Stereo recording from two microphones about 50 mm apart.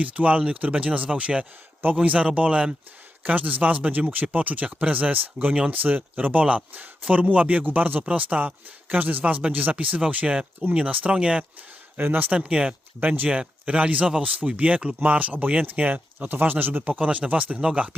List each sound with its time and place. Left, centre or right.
0.0 s speech: right
3.2 s speech: right
11.9 s speech: right
12.3 s speech: right